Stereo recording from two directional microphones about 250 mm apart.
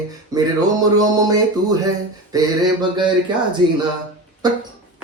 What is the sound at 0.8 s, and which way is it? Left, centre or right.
A man's voice, centre.